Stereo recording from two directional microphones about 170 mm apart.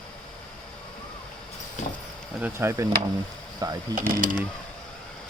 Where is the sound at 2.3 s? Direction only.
10° right (ahead or behind).